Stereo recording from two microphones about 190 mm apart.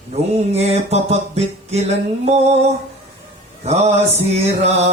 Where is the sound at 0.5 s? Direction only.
35° right (ahead or behind).